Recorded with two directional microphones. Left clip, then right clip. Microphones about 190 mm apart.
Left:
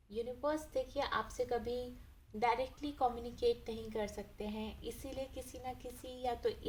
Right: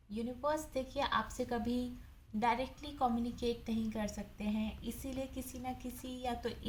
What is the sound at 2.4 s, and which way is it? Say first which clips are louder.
A woman's voice: even; 30° left (ahead or behind).